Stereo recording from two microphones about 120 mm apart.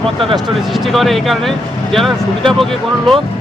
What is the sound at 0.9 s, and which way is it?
Speech, centre (ahead or behind).